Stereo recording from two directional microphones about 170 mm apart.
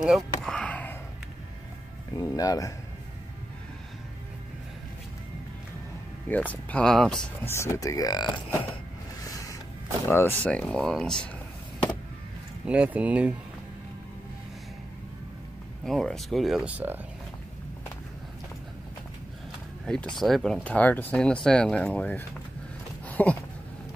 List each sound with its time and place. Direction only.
0.0 s a sound: centre (ahead or behind)
2.1 s speech: 20° left (ahead or behind)
6.2 s speech: 10° left (ahead or behind)
7.5 s speech: 15° left (ahead or behind)
9.2 s creak: 20° left (ahead or behind)
10.0 s speech: 15° left (ahead or behind)
12.6 s speech: 5° right (ahead or behind)
15.8 s speech: centre (ahead or behind)
20.2 s speech: centre (ahead or behind)
23.0 s a sound: 10° left (ahead or behind)